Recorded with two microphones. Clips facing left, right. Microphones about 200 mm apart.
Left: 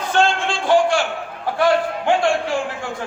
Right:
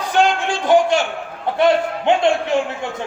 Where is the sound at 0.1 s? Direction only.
15° right (ahead or behind).